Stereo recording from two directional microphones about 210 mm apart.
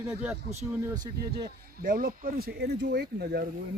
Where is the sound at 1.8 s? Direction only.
40° right (ahead or behind).